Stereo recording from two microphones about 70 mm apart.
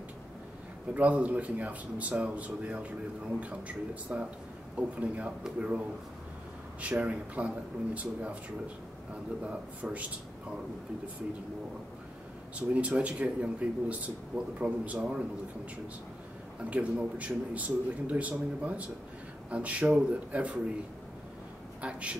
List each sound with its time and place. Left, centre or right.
0.9 s a man's voice: right
6.8 s speech: centre
9.4 s a man's voice: centre
12.5 s speech: centre
16.7 s speech: right